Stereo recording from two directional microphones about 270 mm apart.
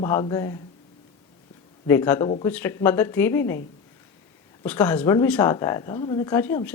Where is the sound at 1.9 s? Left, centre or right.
Centre.